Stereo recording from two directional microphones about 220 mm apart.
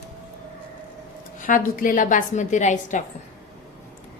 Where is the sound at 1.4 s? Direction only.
35° left (ahead or behind).